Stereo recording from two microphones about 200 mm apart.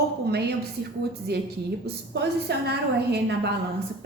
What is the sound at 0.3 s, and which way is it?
A woman's voice, 55° right (ahead or behind).